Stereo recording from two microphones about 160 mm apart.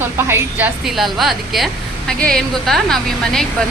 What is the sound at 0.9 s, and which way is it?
A woman's voice, centre (ahead or behind).